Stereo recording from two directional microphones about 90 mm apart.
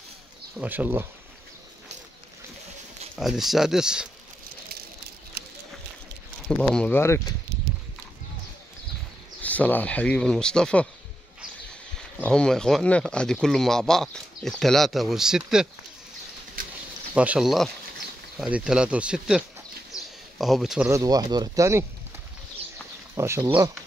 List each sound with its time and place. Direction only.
0.6 s speech: 20° right (ahead or behind)
3.2 s speech: 5° right (ahead or behind)
6.4 s speech: 5° left (ahead or behind)
6.9 s speech: 30° left (ahead or behind)
9.4 s speech: 15° left (ahead or behind)
12.2 s speech: 10° left (ahead or behind); by 15.7 s 5° right (ahead or behind)
17.1 s speech: 15° right (ahead or behind)
17.4 s speech: centre (ahead or behind)
20.9 s speech: 40° right (ahead or behind)
23.1 s speech: 35° right (ahead or behind)